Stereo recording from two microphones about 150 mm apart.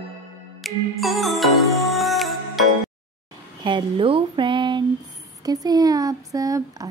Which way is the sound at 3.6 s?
30° right (ahead or behind).